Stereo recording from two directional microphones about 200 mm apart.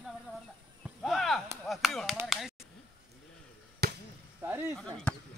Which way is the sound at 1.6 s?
Centre (ahead or behind).